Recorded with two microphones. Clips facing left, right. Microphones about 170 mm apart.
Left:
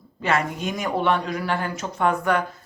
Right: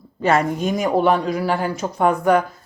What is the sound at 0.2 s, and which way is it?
Speech, 40° right (ahead or behind).